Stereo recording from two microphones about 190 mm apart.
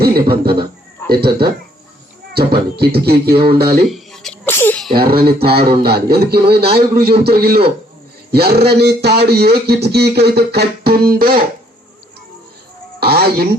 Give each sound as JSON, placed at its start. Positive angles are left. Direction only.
{"t": 0.0, "sound": "a man's voice", "side_deg": -55}
{"t": 3.8, "sound": "sneeze", "side_deg": 0}
{"t": 4.9, "sound": "speech", "side_deg": -50}
{"t": 13.0, "sound": "speech", "side_deg": -55}